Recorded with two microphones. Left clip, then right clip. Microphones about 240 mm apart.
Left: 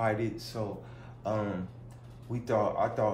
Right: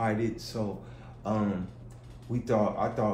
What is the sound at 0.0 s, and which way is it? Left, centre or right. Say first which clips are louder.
Speech: even; centre.